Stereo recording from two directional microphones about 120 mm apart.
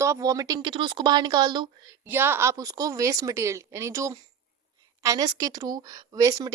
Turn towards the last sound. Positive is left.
turn(degrees=-30)  # may be behind; listen again after turning